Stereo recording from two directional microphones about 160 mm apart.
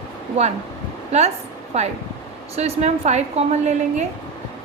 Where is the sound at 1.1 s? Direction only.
45° right (ahead or behind).